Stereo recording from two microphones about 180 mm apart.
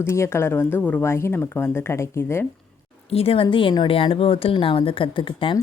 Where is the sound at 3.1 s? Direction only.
30° left (ahead or behind).